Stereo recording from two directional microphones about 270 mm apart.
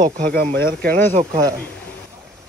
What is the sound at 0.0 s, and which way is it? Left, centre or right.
Speech, right.